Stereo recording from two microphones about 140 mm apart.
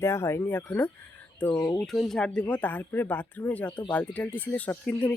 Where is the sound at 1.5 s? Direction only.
30° left (ahead or behind).